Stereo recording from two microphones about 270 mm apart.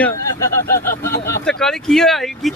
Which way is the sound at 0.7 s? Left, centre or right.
Left.